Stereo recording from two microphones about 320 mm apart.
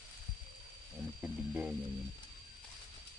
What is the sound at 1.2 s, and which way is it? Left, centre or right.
Speech, centre.